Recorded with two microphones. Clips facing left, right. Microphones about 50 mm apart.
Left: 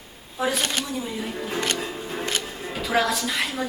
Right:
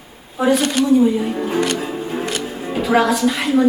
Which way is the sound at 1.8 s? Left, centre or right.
Centre.